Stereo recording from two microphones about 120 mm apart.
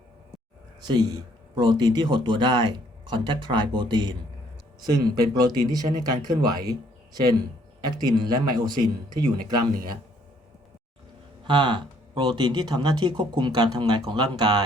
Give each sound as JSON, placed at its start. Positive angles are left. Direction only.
{"t": 0.9, "sound": "speech", "side_deg": -35}
{"t": 7.8, "sound": "speech", "side_deg": -35}
{"t": 11.4, "sound": "speech", "side_deg": -40}